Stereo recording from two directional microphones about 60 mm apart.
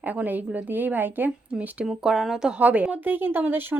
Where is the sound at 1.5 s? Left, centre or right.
Centre.